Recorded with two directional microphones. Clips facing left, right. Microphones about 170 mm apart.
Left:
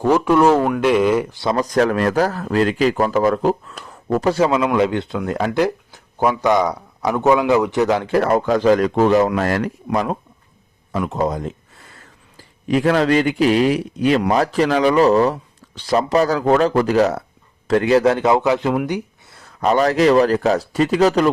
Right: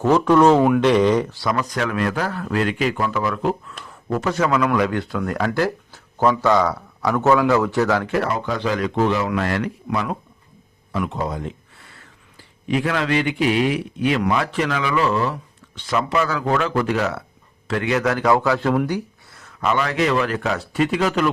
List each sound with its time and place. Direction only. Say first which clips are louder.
0.0 s speech: even; 10° left (ahead or behind)
0.5 s speech: right 1 dB; 5° right (ahead or behind)
0.8 s speech: even; 5° left (ahead or behind)
1.4 s a man's voice: left 3 dB; 25° left (ahead or behind)
1.7 s a man's voice: left 6 dB; 40° left (ahead or behind); by 8.1 s 20° left (ahead or behind)
8.1 s a man's voice: left 6 dB; 45° left (ahead or behind); by 18.8 s 20° left (ahead or behind)
18.9 s a sound: left 1 dB; 20° left (ahead or behind)
19.4 s a man's voice: left 5 dB; 35° left (ahead or behind)